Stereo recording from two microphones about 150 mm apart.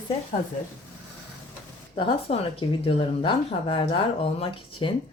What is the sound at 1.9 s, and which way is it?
Speech, 40° left (ahead or behind).